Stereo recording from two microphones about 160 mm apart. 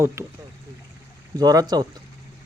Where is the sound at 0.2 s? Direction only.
20° right (ahead or behind).